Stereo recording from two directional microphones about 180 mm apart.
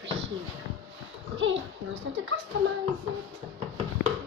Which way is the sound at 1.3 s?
90° right.